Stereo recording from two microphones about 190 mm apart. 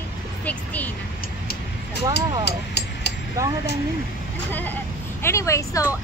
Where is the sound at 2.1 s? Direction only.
65° left (ahead or behind).